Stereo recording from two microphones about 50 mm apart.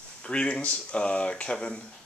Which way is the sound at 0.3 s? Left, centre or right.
Left.